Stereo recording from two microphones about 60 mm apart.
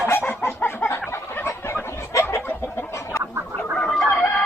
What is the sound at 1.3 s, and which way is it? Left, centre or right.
Fowl, left.